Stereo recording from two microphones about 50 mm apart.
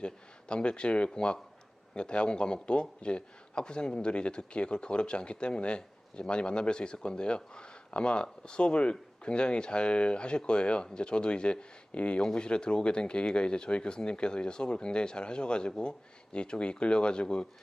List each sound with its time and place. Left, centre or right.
0.0 s a man's voice: centre